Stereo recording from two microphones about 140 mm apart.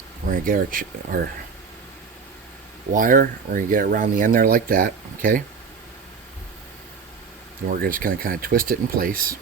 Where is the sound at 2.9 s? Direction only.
75° right (ahead or behind).